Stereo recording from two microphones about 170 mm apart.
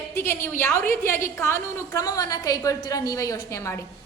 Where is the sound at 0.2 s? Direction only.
15° left (ahead or behind).